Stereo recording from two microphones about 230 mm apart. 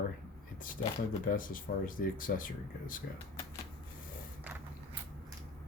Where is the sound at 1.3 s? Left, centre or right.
Left.